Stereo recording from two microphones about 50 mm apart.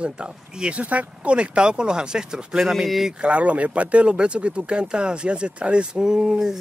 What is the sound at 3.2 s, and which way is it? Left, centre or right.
Speech, right.